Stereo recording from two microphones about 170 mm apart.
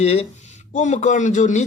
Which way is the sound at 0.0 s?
40° left (ahead or behind).